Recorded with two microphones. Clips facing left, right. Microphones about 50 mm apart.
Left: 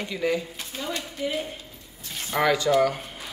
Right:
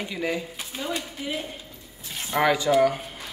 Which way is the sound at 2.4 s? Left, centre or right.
Centre.